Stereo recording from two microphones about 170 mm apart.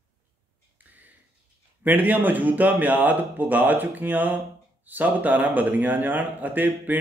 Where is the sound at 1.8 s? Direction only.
10° right (ahead or behind).